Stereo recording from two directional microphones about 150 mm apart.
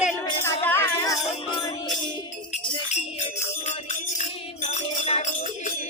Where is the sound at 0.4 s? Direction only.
15° left (ahead or behind).